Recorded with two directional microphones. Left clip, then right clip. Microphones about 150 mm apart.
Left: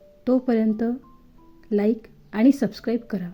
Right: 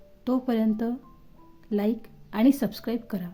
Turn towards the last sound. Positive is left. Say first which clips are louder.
# left 5 dB
turn(degrees=10)  # may be behind; listen again after turning